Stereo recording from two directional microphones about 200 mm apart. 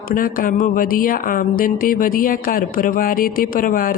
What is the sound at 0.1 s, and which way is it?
Speech, 45° left (ahead or behind).